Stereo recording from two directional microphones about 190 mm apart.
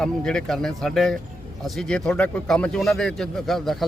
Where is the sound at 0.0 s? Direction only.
5° left (ahead or behind).